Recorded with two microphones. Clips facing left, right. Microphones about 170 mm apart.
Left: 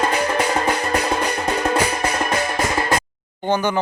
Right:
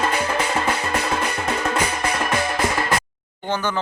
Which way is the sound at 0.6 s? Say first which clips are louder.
Left 3 dB; 35° left (ahead or behind).